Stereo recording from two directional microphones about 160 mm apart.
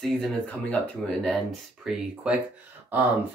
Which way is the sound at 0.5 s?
5° left (ahead or behind).